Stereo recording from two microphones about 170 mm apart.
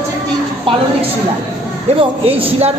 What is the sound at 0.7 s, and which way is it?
Speech, 30° right (ahead or behind).